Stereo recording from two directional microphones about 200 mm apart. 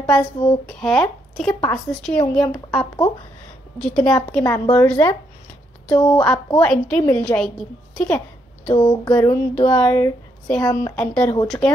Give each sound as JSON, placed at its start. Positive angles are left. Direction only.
{"t": 0.0, "sound": "a woman's voice", "side_deg": 5}
{"t": 4.5, "sound": "a woman's voice", "side_deg": 15}
{"t": 8.6, "sound": "a sound", "side_deg": 25}
{"t": 9.1, "sound": "a woman's voice", "side_deg": 10}